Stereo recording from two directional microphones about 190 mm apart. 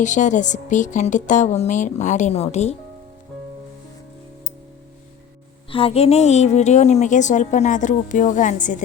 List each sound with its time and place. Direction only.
0.0 s a woman's voice: 40° left (ahead or behind)
5.7 s a woman's voice: 30° left (ahead or behind)